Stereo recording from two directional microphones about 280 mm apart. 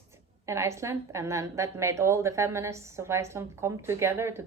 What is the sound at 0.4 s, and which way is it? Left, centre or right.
A woman's voice, centre.